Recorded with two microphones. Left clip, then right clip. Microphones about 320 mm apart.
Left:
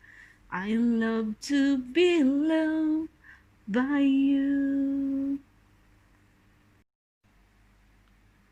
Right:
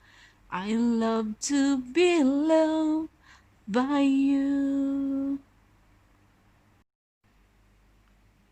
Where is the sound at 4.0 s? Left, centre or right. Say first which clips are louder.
Left 1 dB; right.